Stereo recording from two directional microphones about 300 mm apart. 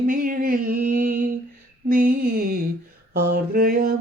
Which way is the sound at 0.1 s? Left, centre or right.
Right.